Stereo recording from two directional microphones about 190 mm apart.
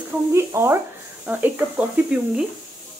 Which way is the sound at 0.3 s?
15° right (ahead or behind).